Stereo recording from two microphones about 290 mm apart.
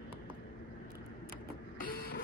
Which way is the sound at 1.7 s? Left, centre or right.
Left.